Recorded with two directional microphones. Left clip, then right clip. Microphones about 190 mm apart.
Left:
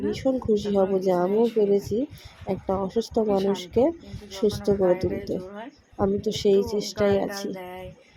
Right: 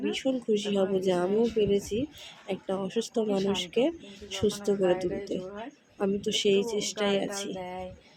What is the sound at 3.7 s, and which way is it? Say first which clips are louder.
Speech: left 5 dB; 15° left (ahead or behind).